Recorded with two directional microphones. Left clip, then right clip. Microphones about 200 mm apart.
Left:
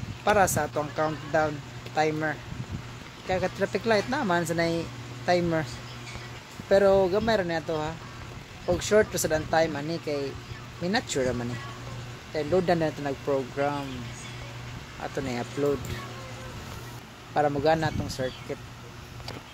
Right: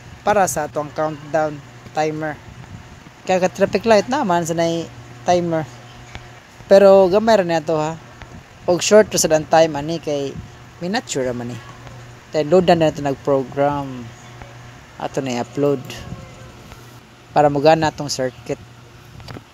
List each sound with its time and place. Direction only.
0.2 s speech: 35° right (ahead or behind)
6.7 s speech: 40° right (ahead or behind)
15.0 s speech: 40° right (ahead or behind)
17.3 s a man's voice: 40° right (ahead or behind)